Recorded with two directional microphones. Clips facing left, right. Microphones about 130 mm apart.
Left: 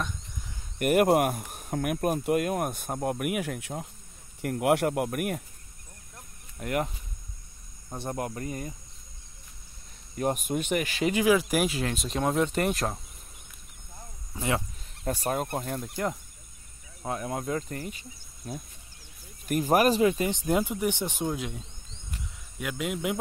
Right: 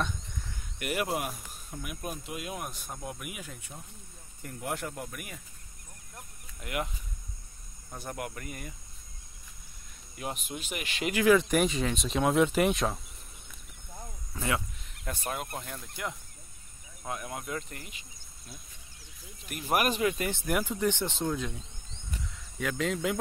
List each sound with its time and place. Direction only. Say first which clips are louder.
0.7 s speech: left 10 dB; 50° left (ahead or behind)
6.6 s speech: left 5 dB; 40° left (ahead or behind)
7.9 s speech: left 5 dB; 30° left (ahead or behind)
10.1 s speech: left 10 dB; 45° left (ahead or behind)
11.2 s speech: right 3 dB; 5° left (ahead or behind)
14.3 s speech: left 3 dB; 20° left (ahead or behind)
15.0 s speech: left 7 dB; 40° left (ahead or behind)
17.0 s speech: left 6 dB; 30° left (ahead or behind)
19.7 s speech: left 5 dB; 30° left (ahead or behind)
20.2 s speech: left 4 dB; 20° left (ahead or behind)
22.6 s speech: right 1 dB; 10° left (ahead or behind)